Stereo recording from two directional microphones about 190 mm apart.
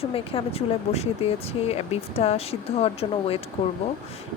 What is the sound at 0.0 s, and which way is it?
Speech, 30° left (ahead or behind).